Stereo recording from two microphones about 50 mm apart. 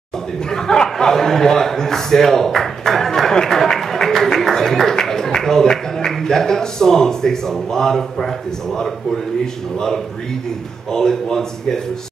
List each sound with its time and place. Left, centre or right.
0.5 s a man's voice: centre